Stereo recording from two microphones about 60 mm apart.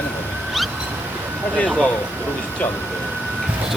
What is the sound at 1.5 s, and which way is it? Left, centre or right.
Speech, centre.